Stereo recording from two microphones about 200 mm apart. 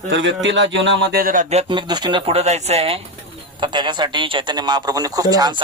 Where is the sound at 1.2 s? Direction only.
40° right (ahead or behind).